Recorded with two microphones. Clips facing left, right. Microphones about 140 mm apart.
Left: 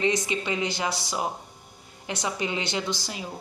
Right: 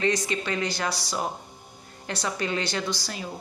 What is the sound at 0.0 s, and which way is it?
A woman's voice, 20° left (ahead or behind).